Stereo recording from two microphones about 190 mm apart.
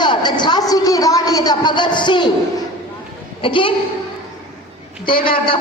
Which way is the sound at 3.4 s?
25° left (ahead or behind).